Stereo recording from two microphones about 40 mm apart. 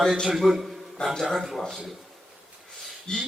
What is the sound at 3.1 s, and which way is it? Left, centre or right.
Speech, centre.